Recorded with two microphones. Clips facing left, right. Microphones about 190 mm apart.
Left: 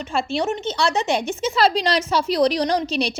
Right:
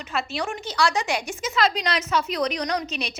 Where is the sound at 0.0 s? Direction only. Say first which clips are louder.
Left 6 dB; 30° left (ahead or behind).